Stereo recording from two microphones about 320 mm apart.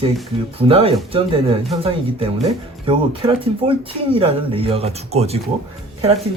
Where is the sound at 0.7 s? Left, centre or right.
Centre.